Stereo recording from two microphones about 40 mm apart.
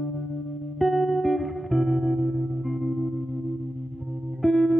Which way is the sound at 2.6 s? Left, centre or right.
Centre.